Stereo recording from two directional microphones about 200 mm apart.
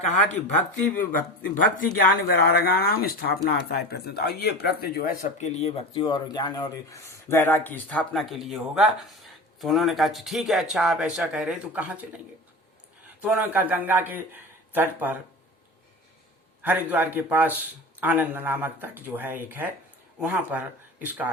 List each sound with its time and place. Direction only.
0.7 s speech: 40° left (ahead or behind)
5.2 s speech: 35° left (ahead or behind); by 12.0 s 5° right (ahead or behind)
13.2 s a man's voice: 10° right (ahead or behind)
16.6 s a man's voice: 10° right (ahead or behind)